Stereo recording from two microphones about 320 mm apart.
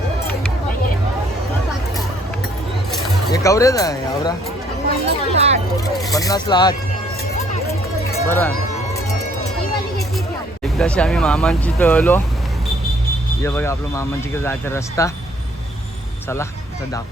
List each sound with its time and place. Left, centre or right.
3.3 s speech: centre
5.0 s a sound: centre
5.7 s vehicle: centre
6.1 s speech: centre
8.3 s speech: centre
10.6 s speech: centre
13.4 s speech: centre